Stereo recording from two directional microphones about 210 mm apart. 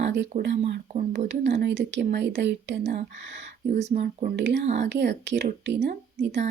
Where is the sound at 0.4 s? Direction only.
55° right (ahead or behind).